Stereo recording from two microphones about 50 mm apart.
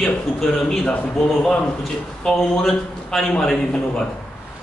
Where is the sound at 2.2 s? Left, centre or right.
Centre.